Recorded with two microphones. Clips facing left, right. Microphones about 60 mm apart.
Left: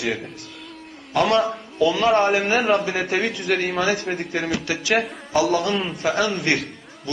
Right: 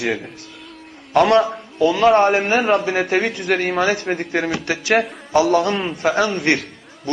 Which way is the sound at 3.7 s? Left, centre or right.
Right.